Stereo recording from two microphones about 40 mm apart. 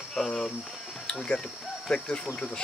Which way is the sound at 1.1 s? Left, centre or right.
Left.